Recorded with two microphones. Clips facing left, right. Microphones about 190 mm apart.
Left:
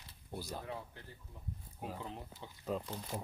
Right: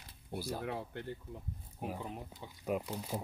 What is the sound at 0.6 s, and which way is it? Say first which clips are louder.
Speech: right 6 dB; 70° right (ahead or behind).